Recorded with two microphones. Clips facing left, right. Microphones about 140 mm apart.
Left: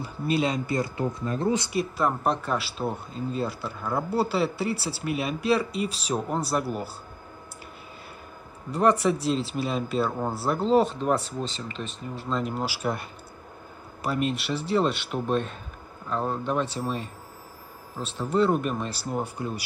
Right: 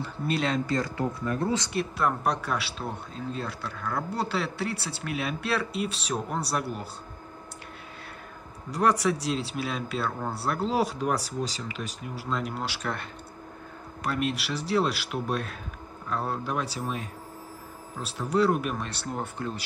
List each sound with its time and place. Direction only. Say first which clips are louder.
0.0 s speech: left 3 dB; 5° left (ahead or behind)
0.9 s speech: left 1 dB; 25° left (ahead or behind)
1.7 s speech: left 2 dB; 5° left (ahead or behind)
9.0 s speech: left 3 dB; centre (ahead or behind)
14.0 s speech: left 2 dB; centre (ahead or behind)